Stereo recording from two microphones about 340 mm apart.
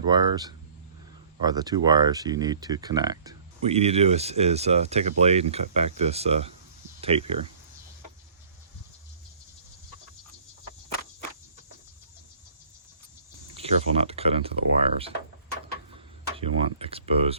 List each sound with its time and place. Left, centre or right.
0.1 s speech: centre
13.5 s speech: centre
16.4 s speech: centre